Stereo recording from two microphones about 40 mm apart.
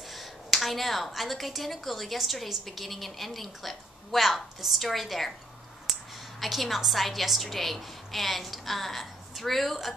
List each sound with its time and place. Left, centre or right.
0.1 s a woman's voice: centre
6.4 s a woman's voice: centre